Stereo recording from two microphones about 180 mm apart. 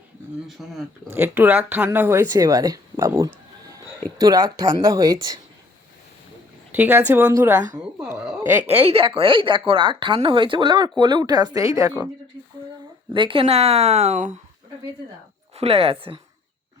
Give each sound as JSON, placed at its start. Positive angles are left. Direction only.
{"t": 0.4, "sound": "speech", "side_deg": 0}
{"t": 1.1, "sound": "speech", "side_deg": -10}
{"t": 6.7, "sound": "a woman's voice", "side_deg": -10}
{"t": 8.8, "sound": "speech", "side_deg": -30}
{"t": 13.1, "sound": "speech", "side_deg": -30}
{"t": 15.5, "sound": "speech", "side_deg": -35}